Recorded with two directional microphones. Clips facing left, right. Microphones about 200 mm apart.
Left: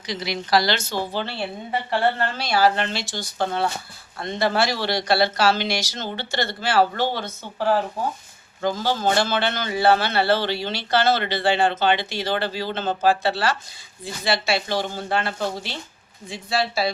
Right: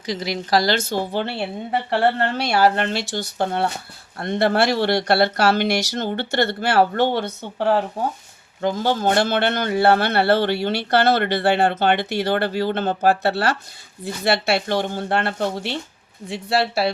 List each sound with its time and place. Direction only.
0.0 s a woman's voice: 45° right (ahead or behind); by 7.3 s 60° right (ahead or behind)
8.8 s a man's voice: 55° right (ahead or behind)